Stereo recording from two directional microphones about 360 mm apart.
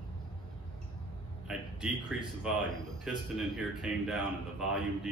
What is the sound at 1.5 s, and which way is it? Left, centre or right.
A man's voice, centre.